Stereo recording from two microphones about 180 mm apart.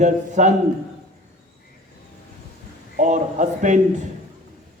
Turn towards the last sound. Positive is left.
turn(degrees=-45)  # may be behind; listen again after turning